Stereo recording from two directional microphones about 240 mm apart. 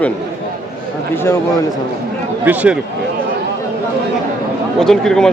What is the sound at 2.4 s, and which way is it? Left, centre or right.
Speech, centre.